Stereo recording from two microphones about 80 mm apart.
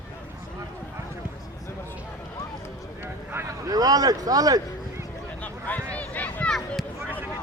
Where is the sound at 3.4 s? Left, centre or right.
Right.